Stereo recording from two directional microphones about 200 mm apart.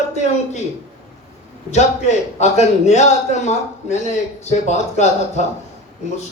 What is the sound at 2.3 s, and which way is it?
A man's voice, 35° left (ahead or behind).